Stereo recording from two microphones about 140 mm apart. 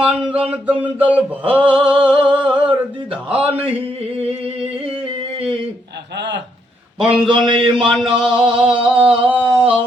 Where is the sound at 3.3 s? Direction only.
40° right (ahead or behind).